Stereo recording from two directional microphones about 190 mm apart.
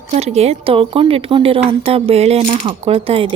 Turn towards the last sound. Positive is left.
turn(degrees=-30)  # may be behind; listen again after turning